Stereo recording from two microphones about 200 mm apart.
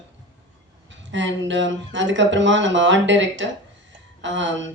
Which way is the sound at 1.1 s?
65° right (ahead or behind).